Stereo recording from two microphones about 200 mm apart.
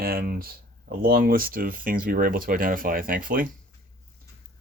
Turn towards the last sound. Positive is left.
turn(degrees=-45)  # may be behind; listen again after turning